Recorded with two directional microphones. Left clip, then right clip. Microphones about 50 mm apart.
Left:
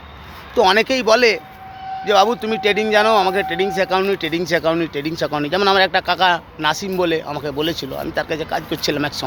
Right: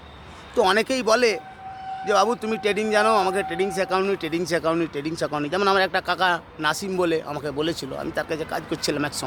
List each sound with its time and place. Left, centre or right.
0.5 s speech: centre
3.3 s speech: centre
6.9 s speech: right
8.0 s speech: right